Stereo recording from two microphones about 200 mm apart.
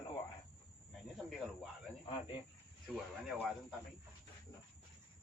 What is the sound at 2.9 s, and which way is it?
Speech, centre (ahead or behind).